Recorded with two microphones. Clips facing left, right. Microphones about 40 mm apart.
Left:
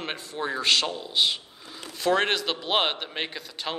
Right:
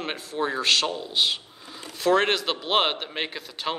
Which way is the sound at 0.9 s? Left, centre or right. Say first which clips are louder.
Even; centre.